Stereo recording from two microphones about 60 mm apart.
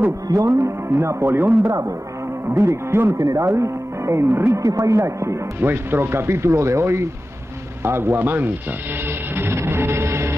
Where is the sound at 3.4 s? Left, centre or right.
Right.